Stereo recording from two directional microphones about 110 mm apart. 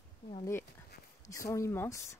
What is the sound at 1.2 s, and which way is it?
Speech, 30° left (ahead or behind).